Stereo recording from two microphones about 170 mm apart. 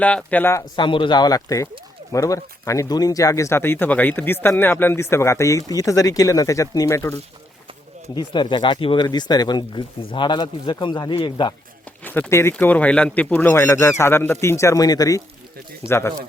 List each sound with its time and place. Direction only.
0.0 s speech: 5° left (ahead or behind)
0.8 s speech: 30° left (ahead or behind)
8.1 s speech: 25° left (ahead or behind)
12.0 s speech: 10° left (ahead or behind)